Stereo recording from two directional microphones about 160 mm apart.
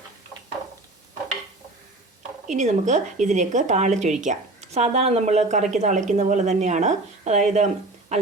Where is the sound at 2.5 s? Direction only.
50° right (ahead or behind).